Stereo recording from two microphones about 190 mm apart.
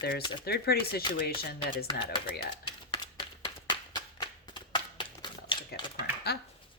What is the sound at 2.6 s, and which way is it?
Typewriter, 25° left (ahead or behind).